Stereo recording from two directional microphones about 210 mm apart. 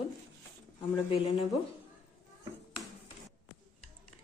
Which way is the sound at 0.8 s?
25° left (ahead or behind).